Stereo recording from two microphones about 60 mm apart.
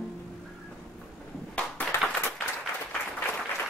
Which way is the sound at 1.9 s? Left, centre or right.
Left.